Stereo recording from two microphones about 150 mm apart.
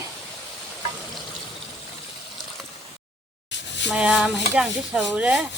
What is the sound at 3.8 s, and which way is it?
Speech, 5° right (ahead or behind).